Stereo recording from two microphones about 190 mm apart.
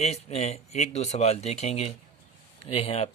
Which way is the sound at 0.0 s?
35° left (ahead or behind).